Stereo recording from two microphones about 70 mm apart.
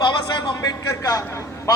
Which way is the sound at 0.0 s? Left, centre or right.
Left.